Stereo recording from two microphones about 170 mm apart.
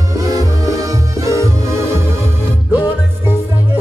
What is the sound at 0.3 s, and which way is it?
Music, 20° right (ahead or behind).